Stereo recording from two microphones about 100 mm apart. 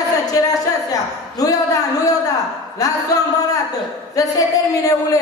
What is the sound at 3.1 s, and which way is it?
A woman's voice, 35° left (ahead or behind).